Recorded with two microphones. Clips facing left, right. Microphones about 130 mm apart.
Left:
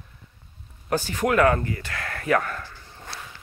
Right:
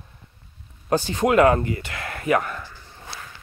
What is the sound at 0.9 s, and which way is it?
Speech, 25° right (ahead or behind).